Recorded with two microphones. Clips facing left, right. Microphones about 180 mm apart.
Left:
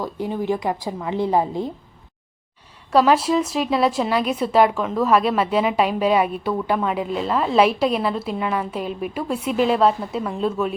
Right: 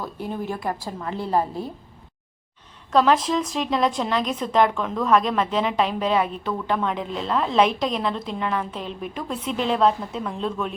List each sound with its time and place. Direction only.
0.0 s speech: 15° left (ahead or behind)
2.9 s speech: 10° left (ahead or behind)